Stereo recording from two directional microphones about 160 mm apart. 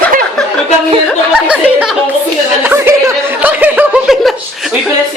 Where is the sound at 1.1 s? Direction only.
5° right (ahead or behind).